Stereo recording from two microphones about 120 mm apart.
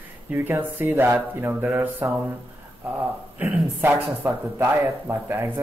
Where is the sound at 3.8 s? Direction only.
20° right (ahead or behind).